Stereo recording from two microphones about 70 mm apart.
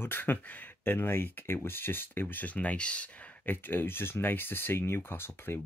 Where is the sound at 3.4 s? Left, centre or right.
Left.